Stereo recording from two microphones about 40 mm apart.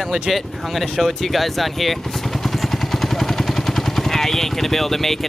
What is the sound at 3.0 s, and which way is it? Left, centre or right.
Vehicle, centre.